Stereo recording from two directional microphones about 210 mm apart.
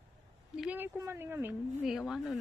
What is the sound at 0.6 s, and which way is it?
Speech, 10° right (ahead or behind).